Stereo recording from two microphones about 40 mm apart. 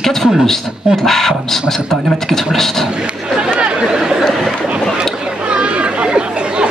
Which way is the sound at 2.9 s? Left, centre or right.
Right.